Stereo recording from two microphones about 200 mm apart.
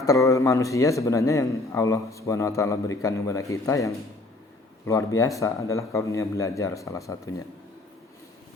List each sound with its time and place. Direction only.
0.0 s a man's voice: 15° left (ahead or behind)